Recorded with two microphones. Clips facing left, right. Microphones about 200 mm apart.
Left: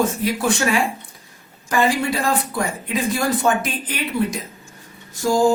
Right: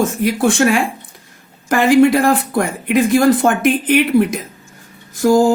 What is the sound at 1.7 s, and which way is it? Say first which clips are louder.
A woman's voice: right 9 dB; 70° right (ahead or behind).